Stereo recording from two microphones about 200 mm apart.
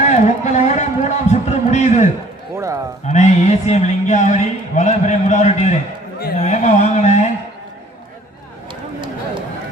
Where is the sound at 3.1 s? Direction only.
35° left (ahead or behind).